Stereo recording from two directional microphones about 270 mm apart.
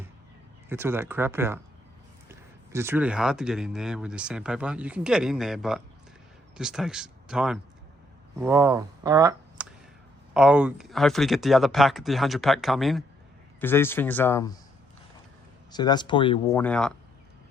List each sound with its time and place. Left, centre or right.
0.7 s speech: centre
15.7 s speech: centre
16.6 s speech: centre